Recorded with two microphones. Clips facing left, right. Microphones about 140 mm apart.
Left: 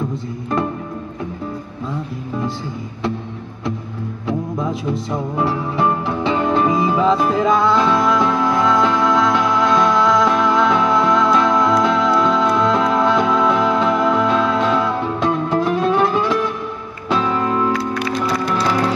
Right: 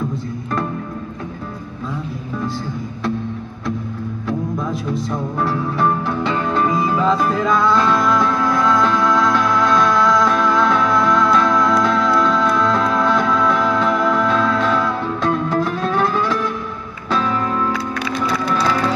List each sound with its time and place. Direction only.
4.3 s music: 20° left (ahead or behind)